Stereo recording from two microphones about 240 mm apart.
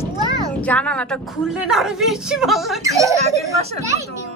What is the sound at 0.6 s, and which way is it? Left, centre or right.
A woman's voice, centre.